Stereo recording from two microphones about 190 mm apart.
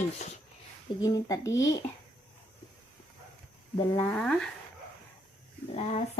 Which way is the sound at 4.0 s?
5° left (ahead or behind).